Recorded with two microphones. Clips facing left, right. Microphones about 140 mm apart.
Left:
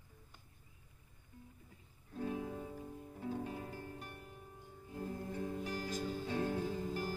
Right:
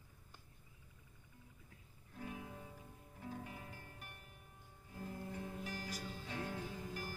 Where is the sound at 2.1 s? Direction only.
30° left (ahead or behind).